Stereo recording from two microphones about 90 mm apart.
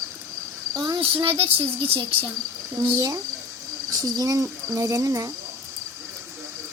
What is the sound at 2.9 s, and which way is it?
Speech, 40° right (ahead or behind).